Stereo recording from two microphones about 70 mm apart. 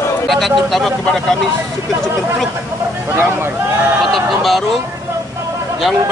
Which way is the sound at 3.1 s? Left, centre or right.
Right.